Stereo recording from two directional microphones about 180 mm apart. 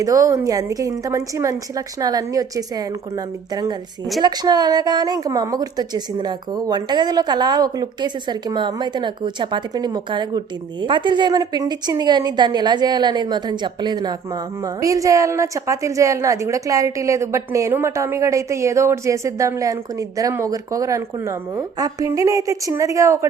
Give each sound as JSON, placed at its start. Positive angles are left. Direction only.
{"t": 0.0, "sound": "speech", "side_deg": -20}